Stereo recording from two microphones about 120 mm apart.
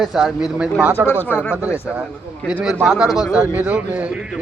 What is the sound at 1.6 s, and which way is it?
Speech, 20° left (ahead or behind).